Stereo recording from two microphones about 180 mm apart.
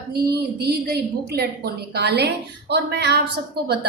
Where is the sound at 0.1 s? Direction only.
65° right (ahead or behind).